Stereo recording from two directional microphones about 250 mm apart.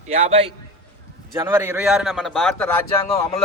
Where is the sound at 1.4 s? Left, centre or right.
Centre.